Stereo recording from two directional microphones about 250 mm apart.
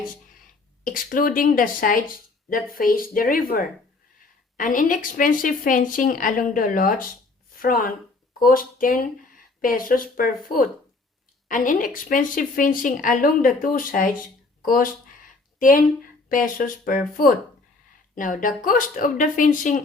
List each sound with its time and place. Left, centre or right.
0.9 s a woman's voice: left